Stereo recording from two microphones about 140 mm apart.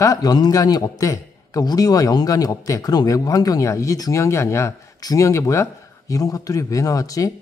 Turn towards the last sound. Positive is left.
turn(degrees=25)  # may be behind; listen again after turning